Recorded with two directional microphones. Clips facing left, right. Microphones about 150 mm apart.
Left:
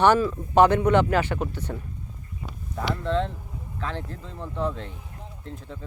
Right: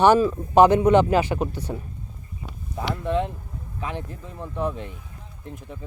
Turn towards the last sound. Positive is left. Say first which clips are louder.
# right 1 dB
turn(degrees=-15)  # may be behind; listen again after turning